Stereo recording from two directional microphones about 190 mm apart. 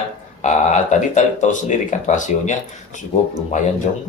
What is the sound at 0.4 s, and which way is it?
Speech, 40° left (ahead or behind).